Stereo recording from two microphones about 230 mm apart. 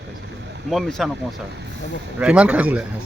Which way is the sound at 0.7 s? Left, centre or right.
Centre.